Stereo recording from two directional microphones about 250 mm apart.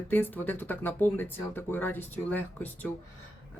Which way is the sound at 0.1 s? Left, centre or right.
Centre.